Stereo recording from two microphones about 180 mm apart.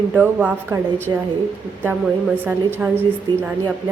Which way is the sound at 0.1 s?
10° right (ahead or behind).